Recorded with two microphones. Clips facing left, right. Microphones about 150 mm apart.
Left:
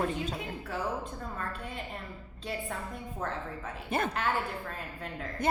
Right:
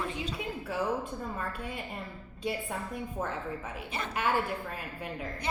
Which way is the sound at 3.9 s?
50° left (ahead or behind).